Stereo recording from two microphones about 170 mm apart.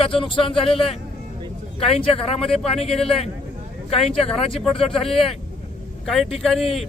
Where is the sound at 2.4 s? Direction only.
5° left (ahead or behind).